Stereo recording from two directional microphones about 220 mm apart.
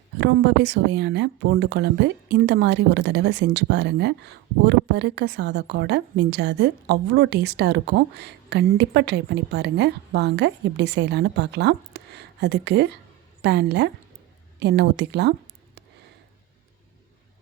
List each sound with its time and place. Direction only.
0.2 s speech: 50° right (ahead or behind)